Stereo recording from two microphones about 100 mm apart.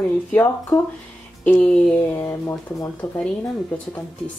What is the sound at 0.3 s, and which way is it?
Speech, 20° left (ahead or behind).